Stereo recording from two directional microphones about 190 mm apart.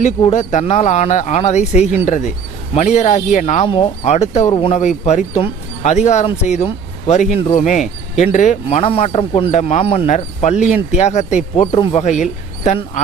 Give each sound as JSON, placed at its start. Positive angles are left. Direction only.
{"t": 0.3, "sound": "speech", "side_deg": 35}
{"t": 11.7, "sound": "speech", "side_deg": 25}
{"t": 12.0, "sound": "speech", "side_deg": 40}